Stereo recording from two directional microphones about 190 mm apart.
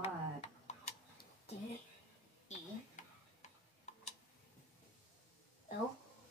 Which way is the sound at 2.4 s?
35° left (ahead or behind).